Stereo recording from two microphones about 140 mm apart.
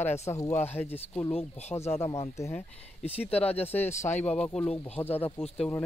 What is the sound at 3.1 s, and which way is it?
Speech, 45° left (ahead or behind).